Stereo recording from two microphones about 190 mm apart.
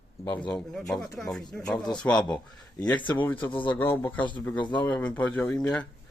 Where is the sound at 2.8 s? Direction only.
20° left (ahead or behind).